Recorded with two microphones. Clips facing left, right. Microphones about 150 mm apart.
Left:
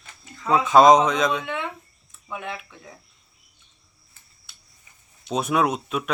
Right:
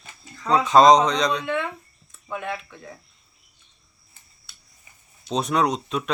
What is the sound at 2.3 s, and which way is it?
Speech, 15° left (ahead or behind).